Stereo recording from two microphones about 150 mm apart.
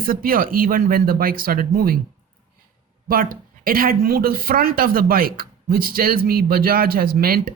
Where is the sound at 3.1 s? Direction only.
75° right (ahead or behind).